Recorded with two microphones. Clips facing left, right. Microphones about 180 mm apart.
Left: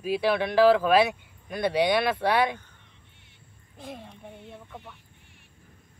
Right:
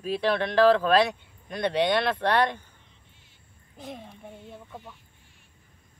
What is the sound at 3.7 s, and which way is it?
Speech, centre (ahead or behind).